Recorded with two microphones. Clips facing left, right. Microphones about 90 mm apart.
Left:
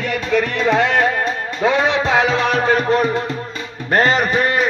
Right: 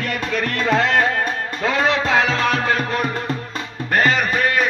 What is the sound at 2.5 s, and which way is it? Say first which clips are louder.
Music: left 5 dB; 35° left (ahead or behind).